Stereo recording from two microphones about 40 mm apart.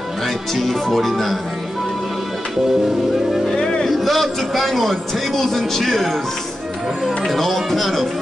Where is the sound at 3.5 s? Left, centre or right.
Centre.